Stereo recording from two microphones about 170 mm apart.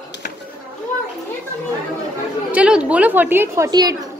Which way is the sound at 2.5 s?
5° right (ahead or behind).